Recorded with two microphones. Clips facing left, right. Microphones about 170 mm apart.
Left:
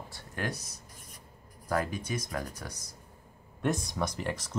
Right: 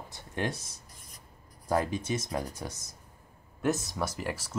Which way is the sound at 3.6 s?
5° right (ahead or behind).